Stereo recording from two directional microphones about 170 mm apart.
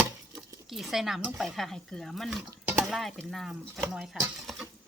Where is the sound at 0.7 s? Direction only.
Centre (ahead or behind).